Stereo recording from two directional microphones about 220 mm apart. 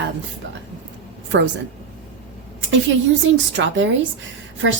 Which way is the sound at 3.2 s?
55° right (ahead or behind).